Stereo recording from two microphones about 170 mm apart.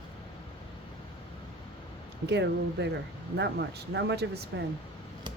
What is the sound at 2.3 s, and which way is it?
Speech, 90° right.